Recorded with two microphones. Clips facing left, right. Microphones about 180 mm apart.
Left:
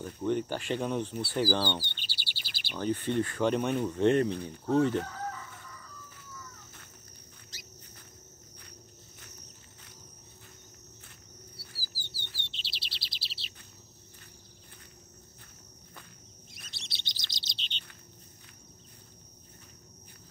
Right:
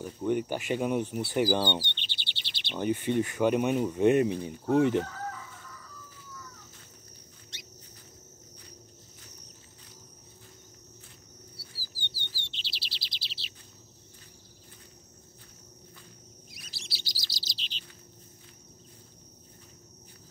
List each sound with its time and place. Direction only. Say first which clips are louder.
0.0 s speech: right 1 dB; 10° right (ahead or behind)
1.8 s chirp: right 3 dB; 5° left (ahead or behind)
2.8 s speech: right 2 dB; 15° right (ahead or behind)
5.0 s chicken: even; centre (ahead or behind)
11.6 s chirp: even; 70° left (ahead or behind)
12.0 s bird: right 5 dB; centre (ahead or behind)
12.4 s chirp: right 1 dB; centre (ahead or behind)
16.9 s chirp: right 4 dB; 5° right (ahead or behind)